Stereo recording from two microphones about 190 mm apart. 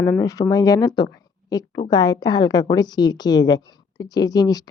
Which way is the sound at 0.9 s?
20° left (ahead or behind).